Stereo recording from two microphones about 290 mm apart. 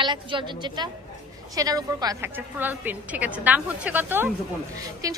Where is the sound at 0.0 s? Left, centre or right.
Centre.